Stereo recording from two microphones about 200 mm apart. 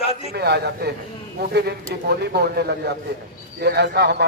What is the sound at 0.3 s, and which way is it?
A man's voice, 55° right (ahead or behind).